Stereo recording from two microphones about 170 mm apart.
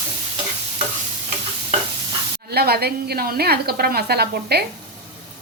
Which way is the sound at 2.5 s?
65° right (ahead or behind).